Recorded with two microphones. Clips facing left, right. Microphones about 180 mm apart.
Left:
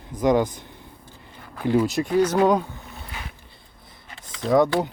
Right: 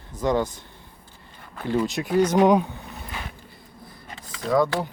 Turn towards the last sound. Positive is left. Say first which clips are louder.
# left 3 dB
turn(degrees=20)  # may be behind; listen again after turning